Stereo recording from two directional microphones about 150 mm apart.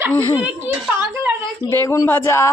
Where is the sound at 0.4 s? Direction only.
10° right (ahead or behind).